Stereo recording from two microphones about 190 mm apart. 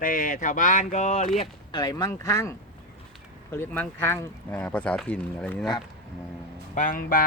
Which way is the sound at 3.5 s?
10° left (ahead or behind).